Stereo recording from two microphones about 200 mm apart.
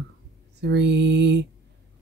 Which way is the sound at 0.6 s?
60° right (ahead or behind).